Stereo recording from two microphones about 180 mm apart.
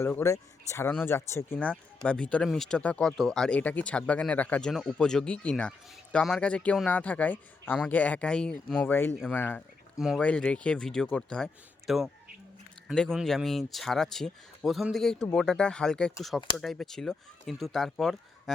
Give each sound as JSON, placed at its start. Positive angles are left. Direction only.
{"t": 0.0, "sound": "speech", "side_deg": 15}